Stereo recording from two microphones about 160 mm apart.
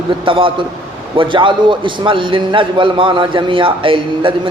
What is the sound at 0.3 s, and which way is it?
A man's voice, 35° right (ahead or behind).